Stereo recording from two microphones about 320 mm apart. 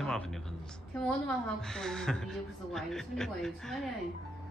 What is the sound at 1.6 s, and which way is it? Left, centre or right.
A woman's voice, centre.